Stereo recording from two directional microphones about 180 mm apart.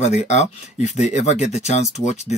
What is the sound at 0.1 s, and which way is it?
Speech, 40° left (ahead or behind).